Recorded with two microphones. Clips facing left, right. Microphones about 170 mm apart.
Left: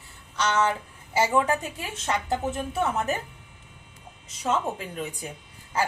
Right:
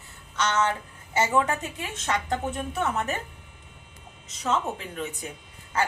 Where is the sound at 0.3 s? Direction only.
10° left (ahead or behind).